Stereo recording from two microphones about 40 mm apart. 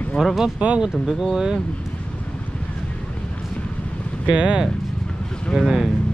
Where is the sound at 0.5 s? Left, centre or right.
Right.